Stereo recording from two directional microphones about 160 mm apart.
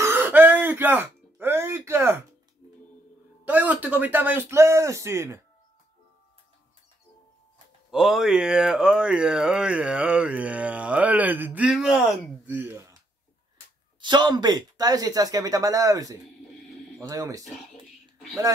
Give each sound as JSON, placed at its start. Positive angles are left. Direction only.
{"t": 0.0, "sound": "a sound", "side_deg": -15}
{"t": 3.4, "sound": "speech", "side_deg": -10}
{"t": 7.9, "sound": "speech", "side_deg": 0}
{"t": 12.5, "sound": "speech", "side_deg": -15}
{"t": 14.0, "sound": "speech", "side_deg": -25}